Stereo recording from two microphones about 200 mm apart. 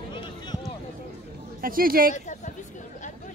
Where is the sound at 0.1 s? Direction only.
25° left (ahead or behind).